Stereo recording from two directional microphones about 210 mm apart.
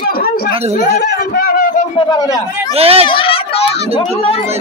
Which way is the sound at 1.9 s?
20° left (ahead or behind).